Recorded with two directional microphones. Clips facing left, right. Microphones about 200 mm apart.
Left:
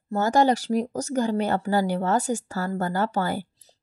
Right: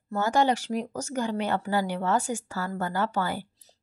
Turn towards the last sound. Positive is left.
turn(degrees=45)  # may be behind; listen again after turning